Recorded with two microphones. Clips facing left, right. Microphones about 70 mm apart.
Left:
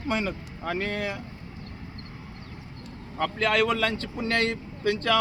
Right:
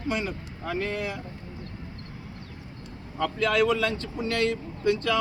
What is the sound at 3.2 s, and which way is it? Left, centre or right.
Speech, left.